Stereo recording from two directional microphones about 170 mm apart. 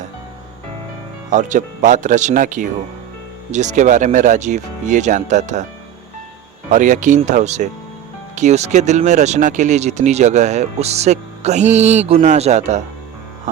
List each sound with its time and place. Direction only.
1.3 s speech: 45° right (ahead or behind)
6.7 s speech: 50° right (ahead or behind)